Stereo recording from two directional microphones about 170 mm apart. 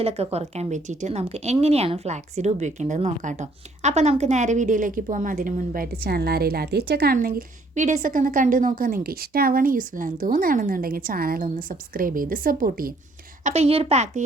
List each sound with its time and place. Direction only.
0.0 s a woman's voice: 35° right (ahead or behind); by 12.9 s 55° right (ahead or behind)
13.4 s a woman's voice: 40° right (ahead or behind)